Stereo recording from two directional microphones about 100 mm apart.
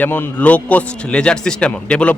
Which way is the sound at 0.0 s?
20° left (ahead or behind).